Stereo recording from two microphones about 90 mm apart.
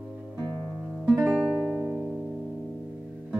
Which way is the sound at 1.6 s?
20° right (ahead or behind).